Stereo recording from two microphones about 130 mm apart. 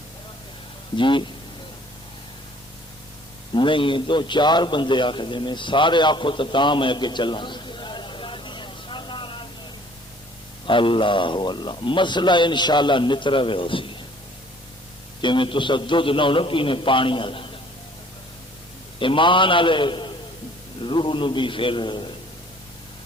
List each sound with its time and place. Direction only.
0.9 s a man's voice: 40° left (ahead or behind)
3.5 s a man's voice: 40° left (ahead or behind)
10.7 s a man's voice: 40° left (ahead or behind)
15.2 s a man's voice: 40° left (ahead or behind)
18.9 s a man's voice: 40° left (ahead or behind)